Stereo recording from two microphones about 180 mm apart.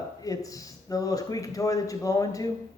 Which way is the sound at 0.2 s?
20° left (ahead or behind).